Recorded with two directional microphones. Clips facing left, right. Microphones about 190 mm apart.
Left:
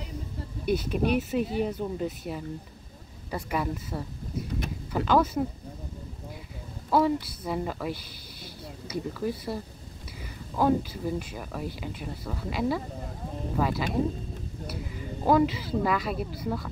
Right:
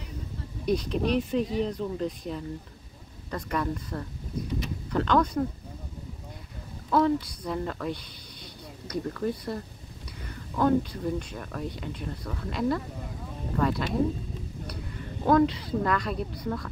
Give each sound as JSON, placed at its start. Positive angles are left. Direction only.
{"t": 0.7, "sound": "speech", "side_deg": 5}
{"t": 6.9, "sound": "speech", "side_deg": 5}
{"t": 10.6, "sound": "a woman's voice", "side_deg": 5}